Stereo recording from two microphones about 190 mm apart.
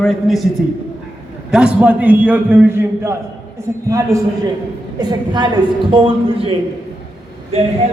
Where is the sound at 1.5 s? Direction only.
5° right (ahead or behind); by 5.5 s 20° right (ahead or behind).